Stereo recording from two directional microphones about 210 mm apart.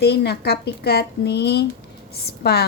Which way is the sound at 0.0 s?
50° left (ahead or behind).